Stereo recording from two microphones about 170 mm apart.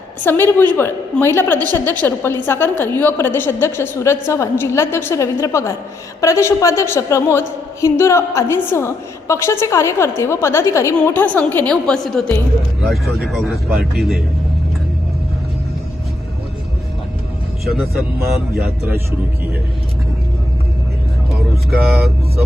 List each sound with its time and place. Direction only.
0.3 s a woman's voice: 10° left (ahead or behind)
18.2 s speech: 65° right (ahead or behind)
21.7 s speech: centre (ahead or behind)